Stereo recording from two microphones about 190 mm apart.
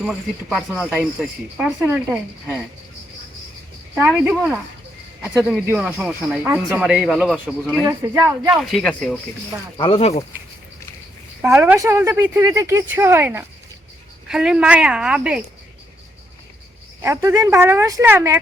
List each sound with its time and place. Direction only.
0.0 s speech: 5° right (ahead or behind)
3.9 s speech: 5° right (ahead or behind)
7.9 s speech: 15° right (ahead or behind)
8.6 s speech: centre (ahead or behind)
9.7 s speech: 30° left (ahead or behind)
11.4 s speech: 10° right (ahead or behind)
17.0 s speech: 15° right (ahead or behind)